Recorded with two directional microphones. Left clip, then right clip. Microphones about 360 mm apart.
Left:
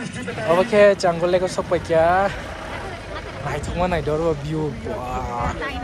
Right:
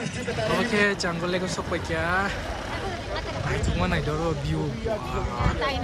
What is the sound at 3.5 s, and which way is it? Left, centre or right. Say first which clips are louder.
Speech: left 6 dB; centre.